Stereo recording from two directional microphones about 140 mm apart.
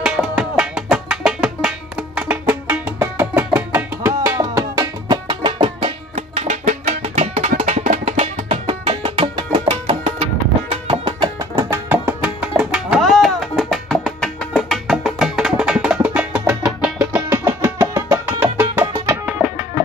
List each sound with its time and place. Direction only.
0.0 s music: 5° right (ahead or behind); by 5.9 s 35° right (ahead or behind)
6.1 s music: 50° right (ahead or behind)
8.5 s music: 40° right (ahead or behind)
10.9 s music: 30° right (ahead or behind)
11.5 s music: 20° right (ahead or behind)
12.2 s music: 5° right (ahead or behind)
17.3 s music: 20° right (ahead or behind)